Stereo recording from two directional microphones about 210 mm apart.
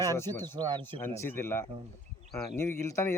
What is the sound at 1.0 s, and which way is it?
Speech, 10° left (ahead or behind).